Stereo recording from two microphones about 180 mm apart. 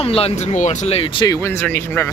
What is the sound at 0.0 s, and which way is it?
Speech, 35° left (ahead or behind).